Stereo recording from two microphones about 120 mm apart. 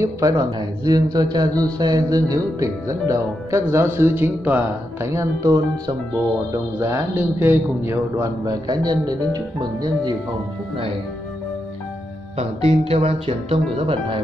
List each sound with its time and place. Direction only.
0.0 s a man's voice: 30° right (ahead or behind)
6.8 s a man's voice: 20° right (ahead or behind)
12.4 s speech: 60° right (ahead or behind)